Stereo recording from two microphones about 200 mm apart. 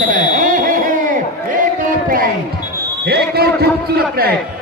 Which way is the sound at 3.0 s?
50° right (ahead or behind).